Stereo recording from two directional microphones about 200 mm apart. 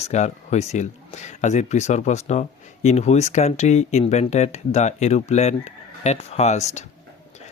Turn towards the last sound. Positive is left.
turn(degrees=35)  # may be behind; listen again after turning